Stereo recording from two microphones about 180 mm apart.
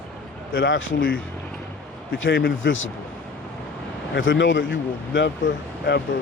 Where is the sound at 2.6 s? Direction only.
90° left.